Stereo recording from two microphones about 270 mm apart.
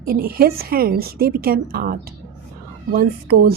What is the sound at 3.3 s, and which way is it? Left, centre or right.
Speech, right.